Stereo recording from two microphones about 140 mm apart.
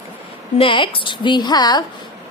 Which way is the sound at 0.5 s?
35° left (ahead or behind).